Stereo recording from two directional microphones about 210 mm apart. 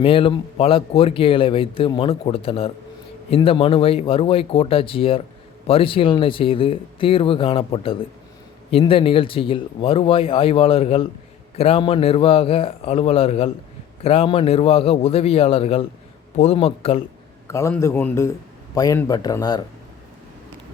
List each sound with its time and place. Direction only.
0.0 s speech: 25° left (ahead or behind)
17.5 s a man's voice: 15° left (ahead or behind)